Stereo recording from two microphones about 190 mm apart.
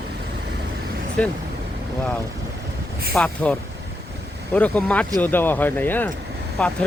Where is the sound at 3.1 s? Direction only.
5° left (ahead or behind).